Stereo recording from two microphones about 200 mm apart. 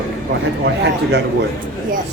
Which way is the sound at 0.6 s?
60° right (ahead or behind).